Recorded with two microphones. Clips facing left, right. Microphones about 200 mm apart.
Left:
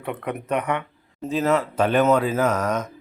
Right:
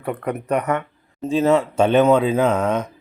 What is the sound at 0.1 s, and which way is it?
Speech, 5° left (ahead or behind).